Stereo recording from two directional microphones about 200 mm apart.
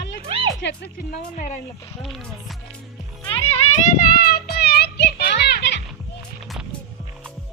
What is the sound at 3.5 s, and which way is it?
Child singing, 35° left (ahead or behind).